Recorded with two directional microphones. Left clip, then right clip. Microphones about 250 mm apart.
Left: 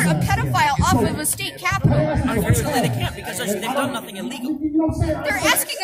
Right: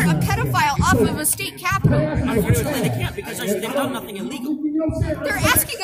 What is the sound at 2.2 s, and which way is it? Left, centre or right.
Speech, centre.